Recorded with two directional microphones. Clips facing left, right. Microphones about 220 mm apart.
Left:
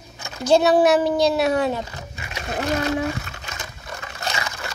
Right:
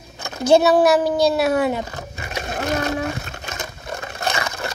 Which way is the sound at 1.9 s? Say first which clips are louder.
Right 4 dB; 50° right (ahead or behind).